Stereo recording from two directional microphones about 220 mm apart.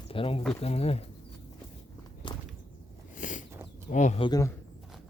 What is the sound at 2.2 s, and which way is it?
Whip, 20° left (ahead or behind).